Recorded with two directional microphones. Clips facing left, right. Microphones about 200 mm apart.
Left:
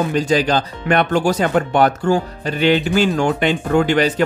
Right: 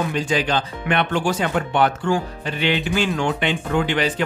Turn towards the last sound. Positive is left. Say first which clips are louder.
# left 5 dB
turn(degrees=45)  # may be behind; listen again after turning